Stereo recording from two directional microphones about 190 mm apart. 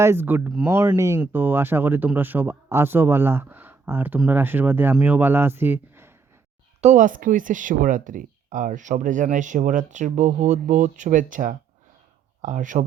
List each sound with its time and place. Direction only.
0.0 s speech: 10° right (ahead or behind)
6.8 s speech: 40° right (ahead or behind)